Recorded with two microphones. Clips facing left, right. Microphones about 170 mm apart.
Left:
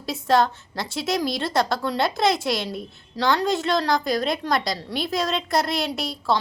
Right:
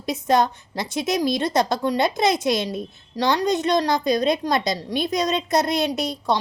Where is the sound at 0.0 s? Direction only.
20° right (ahead or behind).